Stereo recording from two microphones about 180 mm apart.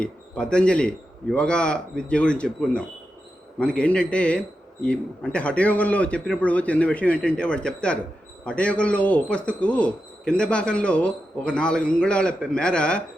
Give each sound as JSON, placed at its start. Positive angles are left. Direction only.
{"t": 0.0, "sound": "a man's voice", "side_deg": 5}